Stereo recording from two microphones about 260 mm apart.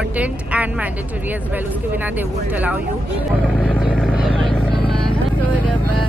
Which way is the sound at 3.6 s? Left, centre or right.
Centre.